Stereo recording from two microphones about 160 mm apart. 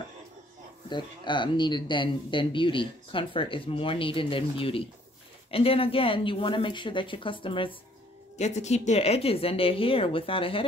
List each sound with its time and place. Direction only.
0.8 s speech: 30° left (ahead or behind)
8.4 s speech: 45° left (ahead or behind)